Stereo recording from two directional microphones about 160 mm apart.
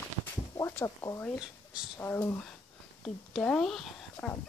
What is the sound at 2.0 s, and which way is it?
Speech, 15° left (ahead or behind).